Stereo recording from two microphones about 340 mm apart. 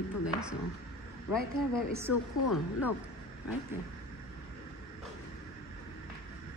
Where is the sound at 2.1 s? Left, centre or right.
Left.